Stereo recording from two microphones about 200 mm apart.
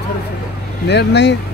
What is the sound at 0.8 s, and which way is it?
Speech, 60° left (ahead or behind).